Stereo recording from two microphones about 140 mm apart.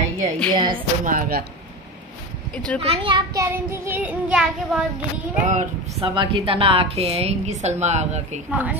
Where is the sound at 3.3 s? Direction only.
15° right (ahead or behind).